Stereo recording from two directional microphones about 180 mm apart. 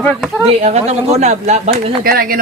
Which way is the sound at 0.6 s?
35° right (ahead or behind).